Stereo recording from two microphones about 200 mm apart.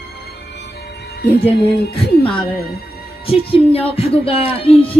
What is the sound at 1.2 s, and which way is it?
Music, 50° left (ahead or behind).